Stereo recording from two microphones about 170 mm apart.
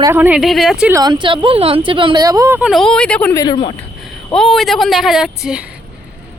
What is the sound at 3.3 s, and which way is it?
Speech, 25° left (ahead or behind).